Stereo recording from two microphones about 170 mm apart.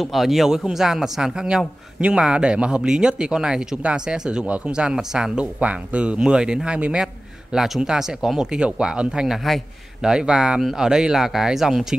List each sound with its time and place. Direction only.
0.0 s a man's voice: centre (ahead or behind)